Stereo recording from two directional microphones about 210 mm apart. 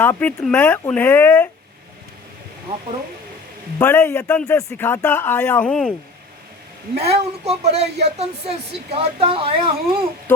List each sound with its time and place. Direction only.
0.0 s speech: 10° left (ahead or behind)
3.8 s speech: 10° left (ahead or behind)
6.9 s speech: 30° right (ahead or behind)